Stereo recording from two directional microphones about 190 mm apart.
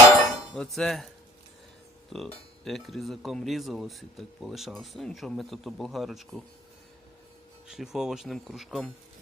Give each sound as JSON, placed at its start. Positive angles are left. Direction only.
{"t": 0.5, "sound": "speech", "side_deg": 5}
{"t": 7.7, "sound": "speech", "side_deg": 0}